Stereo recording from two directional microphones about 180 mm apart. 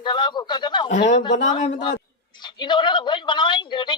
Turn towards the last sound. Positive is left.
turn(degrees=25)  # may be behind; listen again after turning